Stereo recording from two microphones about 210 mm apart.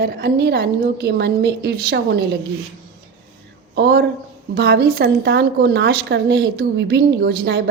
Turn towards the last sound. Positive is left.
turn(degrees=-50)  # may be behind; listen again after turning